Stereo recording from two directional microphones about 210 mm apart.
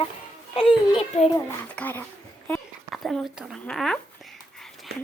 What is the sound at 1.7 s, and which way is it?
A woman's voice, 10° left (ahead or behind).